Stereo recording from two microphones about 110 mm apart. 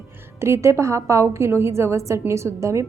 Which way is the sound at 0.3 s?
25° right (ahead or behind).